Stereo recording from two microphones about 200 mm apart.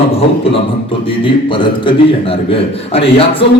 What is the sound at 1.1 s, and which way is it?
A man's voice, 25° left (ahead or behind).